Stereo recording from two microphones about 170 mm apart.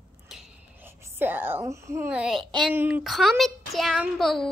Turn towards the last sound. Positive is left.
turn(degrees=0)  # may be behind; listen again after turning